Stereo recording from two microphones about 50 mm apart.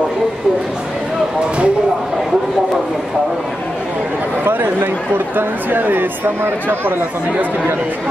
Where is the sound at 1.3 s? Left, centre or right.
Right.